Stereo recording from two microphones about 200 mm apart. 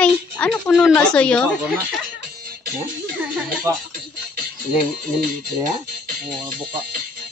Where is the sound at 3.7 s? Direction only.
15° right (ahead or behind).